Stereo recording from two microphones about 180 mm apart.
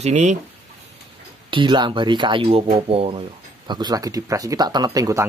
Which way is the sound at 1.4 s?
25° right (ahead or behind).